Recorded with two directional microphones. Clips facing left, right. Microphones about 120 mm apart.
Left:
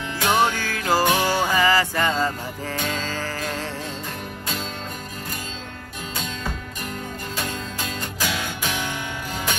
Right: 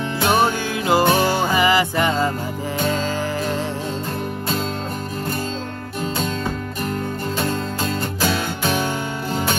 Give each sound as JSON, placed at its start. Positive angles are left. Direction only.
{"t": 0.2, "sound": "music", "side_deg": -15}
{"t": 1.0, "sound": "music", "side_deg": -45}
{"t": 1.3, "sound": "music", "side_deg": -15}
{"t": 7.3, "sound": "music", "side_deg": -45}